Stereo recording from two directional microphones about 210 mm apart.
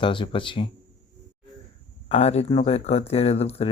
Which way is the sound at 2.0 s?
30° left (ahead or behind).